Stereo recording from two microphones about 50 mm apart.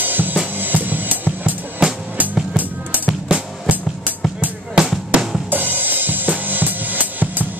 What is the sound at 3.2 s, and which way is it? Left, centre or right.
Music, right.